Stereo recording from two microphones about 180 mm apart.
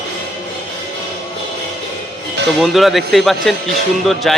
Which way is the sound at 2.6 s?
Centre (ahead or behind).